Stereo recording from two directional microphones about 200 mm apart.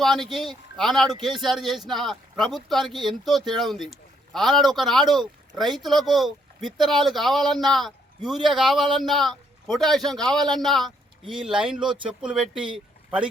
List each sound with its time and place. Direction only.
0.0 s speech: centre (ahead or behind)